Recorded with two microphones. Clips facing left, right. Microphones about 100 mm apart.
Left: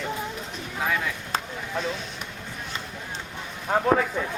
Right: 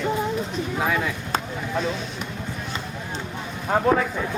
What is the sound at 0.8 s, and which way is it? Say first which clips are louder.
Speech: right 2 dB; 15° right (ahead or behind).